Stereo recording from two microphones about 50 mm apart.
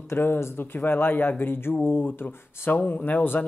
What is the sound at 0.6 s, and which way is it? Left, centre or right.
Speech, left.